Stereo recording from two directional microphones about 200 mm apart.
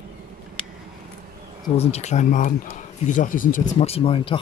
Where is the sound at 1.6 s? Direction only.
30° left (ahead or behind).